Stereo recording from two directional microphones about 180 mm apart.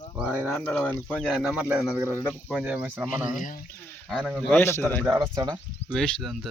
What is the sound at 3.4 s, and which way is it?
Speech, 50° left (ahead or behind).